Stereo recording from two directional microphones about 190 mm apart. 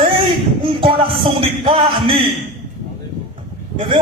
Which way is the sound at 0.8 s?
30° right (ahead or behind).